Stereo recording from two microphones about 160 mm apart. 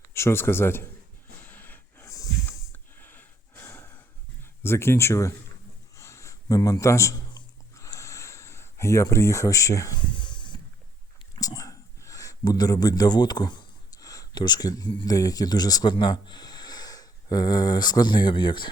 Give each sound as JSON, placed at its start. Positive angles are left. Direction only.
{"t": 0.1, "sound": "speech", "side_deg": 15}
{"t": 1.5, "sound": "snort", "side_deg": 10}
{"t": 4.6, "sound": "speech", "side_deg": 15}
{"t": 6.0, "sound": "a sound", "side_deg": 20}
{"t": 11.3, "sound": "speech", "side_deg": 20}